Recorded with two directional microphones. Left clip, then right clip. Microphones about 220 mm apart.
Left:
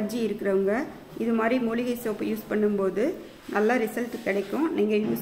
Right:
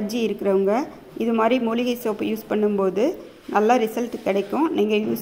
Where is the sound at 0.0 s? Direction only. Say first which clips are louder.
Right 4 dB; 15° right (ahead or behind).